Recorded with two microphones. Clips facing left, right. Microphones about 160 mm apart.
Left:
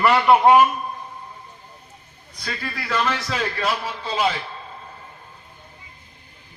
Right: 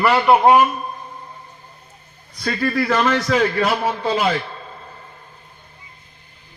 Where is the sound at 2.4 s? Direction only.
80° right.